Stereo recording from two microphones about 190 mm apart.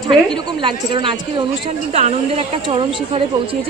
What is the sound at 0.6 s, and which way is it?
A woman's voice, 25° right (ahead or behind).